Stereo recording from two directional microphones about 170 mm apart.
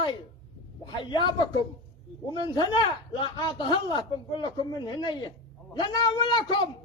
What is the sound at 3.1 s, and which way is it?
A man's voice, 25° left (ahead or behind).